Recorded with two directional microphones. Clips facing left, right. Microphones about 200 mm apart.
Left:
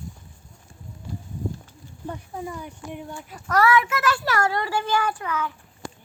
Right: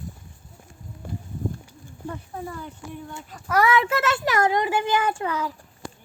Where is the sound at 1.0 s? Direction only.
55° right (ahead or behind).